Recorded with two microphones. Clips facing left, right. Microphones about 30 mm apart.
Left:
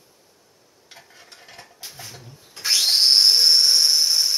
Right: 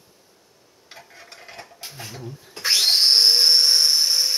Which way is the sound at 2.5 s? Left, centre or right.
Right.